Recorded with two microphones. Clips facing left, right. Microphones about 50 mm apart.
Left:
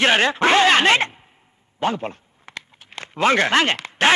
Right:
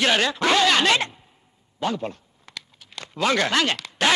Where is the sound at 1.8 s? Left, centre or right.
Left.